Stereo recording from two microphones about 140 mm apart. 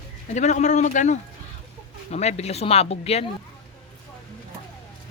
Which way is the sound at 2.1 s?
50° left (ahead or behind).